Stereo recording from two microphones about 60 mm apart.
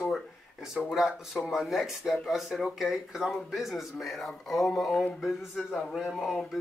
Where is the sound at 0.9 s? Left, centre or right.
Centre.